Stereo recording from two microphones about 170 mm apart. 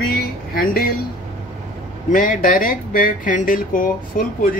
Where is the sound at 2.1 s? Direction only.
50° left (ahead or behind).